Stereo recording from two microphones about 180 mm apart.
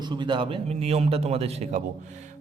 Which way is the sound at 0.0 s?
25° right (ahead or behind).